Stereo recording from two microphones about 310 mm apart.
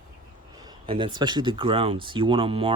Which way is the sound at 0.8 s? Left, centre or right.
Centre.